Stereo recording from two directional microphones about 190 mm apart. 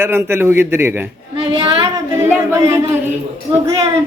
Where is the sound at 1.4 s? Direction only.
30° right (ahead or behind).